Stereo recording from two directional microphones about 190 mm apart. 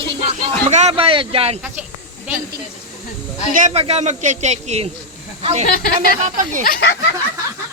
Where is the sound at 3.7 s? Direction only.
35° right (ahead or behind).